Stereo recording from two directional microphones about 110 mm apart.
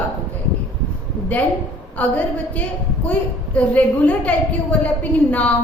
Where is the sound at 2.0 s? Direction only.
15° left (ahead or behind).